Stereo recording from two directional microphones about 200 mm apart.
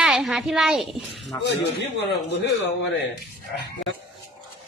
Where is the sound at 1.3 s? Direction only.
15° left (ahead or behind).